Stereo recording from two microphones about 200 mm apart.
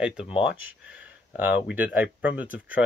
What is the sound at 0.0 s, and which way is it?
Speech, 5° right (ahead or behind).